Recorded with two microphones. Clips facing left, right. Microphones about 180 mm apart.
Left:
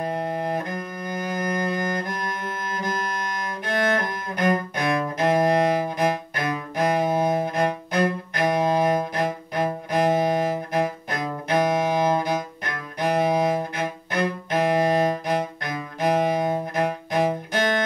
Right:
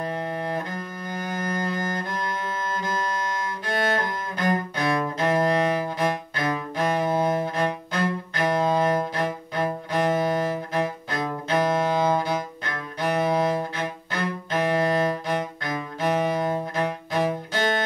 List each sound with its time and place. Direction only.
0.0 s cello: 15° left (ahead or behind)
2.7 s music: 15° left (ahead or behind)
4.0 s music: 15° left (ahead or behind)
5.9 s cello: 15° left (ahead or behind)